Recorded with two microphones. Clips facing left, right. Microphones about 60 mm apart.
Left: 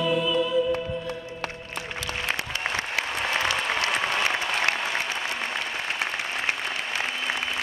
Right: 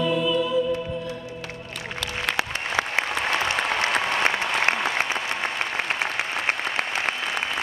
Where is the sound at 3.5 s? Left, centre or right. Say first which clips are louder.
Right 2 dB; right.